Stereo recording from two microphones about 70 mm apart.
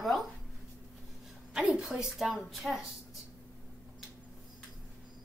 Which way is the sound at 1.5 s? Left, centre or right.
Centre.